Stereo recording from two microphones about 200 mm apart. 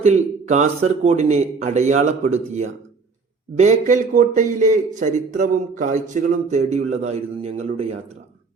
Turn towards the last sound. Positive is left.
turn(degrees=-30)  # may be behind; listen again after turning